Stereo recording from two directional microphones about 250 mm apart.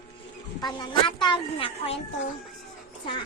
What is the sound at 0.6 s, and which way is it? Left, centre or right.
A child's voice, centre.